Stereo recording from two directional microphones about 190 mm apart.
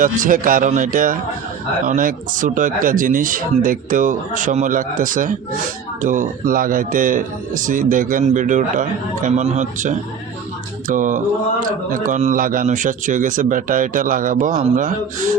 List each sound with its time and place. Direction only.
0.2 s speech: 45° right (ahead or behind)